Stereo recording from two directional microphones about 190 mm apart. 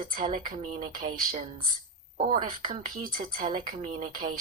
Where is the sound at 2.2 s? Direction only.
45° right (ahead or behind).